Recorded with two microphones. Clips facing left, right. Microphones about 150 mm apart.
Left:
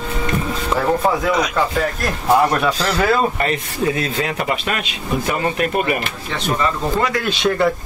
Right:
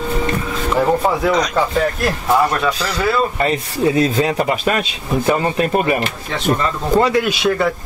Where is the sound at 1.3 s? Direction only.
5° left (ahead or behind).